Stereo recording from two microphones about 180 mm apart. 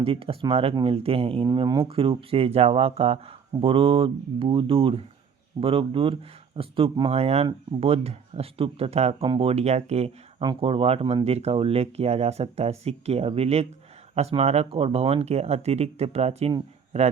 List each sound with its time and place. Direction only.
0.0 s speech: 30° right (ahead or behind)